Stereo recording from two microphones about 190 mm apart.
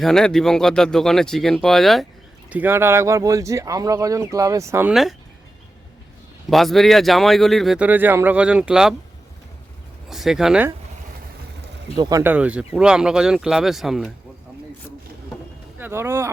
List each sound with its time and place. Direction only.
0.0 s a man's voice: 5° left (ahead or behind)
2.5 s speech: 10° right (ahead or behind)
6.5 s a man's voice: centre (ahead or behind)
10.1 s a man's voice: centre (ahead or behind)
11.9 s a man's voice: 20° right (ahead or behind); by 14.1 s centre (ahead or behind)
15.8 s speech: 15° right (ahead or behind)